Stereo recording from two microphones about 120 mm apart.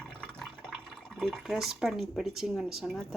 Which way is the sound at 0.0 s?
10° left (ahead or behind).